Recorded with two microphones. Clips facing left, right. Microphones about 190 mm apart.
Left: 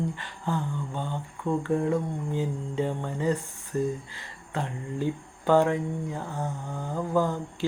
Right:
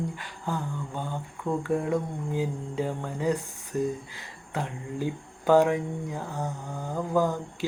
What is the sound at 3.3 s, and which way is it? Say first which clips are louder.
Speech: right 2 dB; 15° right (ahead or behind).